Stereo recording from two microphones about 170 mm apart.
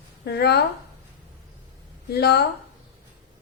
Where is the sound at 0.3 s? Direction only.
75° left (ahead or behind).